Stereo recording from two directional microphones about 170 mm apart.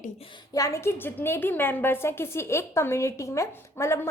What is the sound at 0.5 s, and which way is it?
A woman's voice, 20° left (ahead or behind).